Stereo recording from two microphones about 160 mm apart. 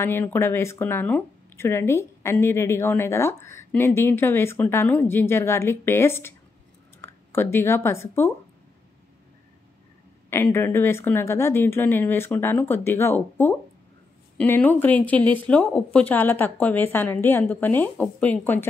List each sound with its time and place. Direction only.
0.0 s speech: 15° left (ahead or behind)
10.3 s speech: 15° left (ahead or behind)